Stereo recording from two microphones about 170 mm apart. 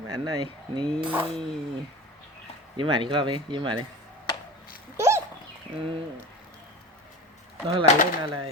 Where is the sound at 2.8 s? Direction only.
30° right (ahead or behind).